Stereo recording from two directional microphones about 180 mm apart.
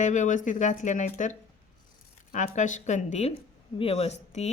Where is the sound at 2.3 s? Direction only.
45° left (ahead or behind).